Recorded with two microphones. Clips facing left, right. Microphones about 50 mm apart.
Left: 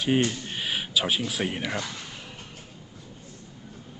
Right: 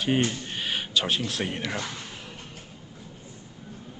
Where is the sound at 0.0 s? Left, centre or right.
Centre.